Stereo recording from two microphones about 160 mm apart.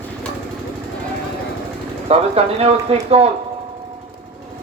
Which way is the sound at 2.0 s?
40° right (ahead or behind).